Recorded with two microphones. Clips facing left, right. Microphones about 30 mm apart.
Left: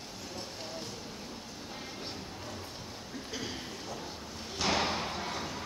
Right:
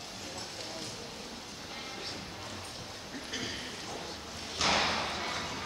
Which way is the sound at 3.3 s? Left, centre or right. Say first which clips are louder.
Right 1 dB; right.